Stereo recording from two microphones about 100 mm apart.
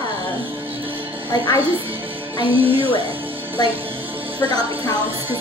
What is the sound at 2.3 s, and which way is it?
Speech, 65° right (ahead or behind).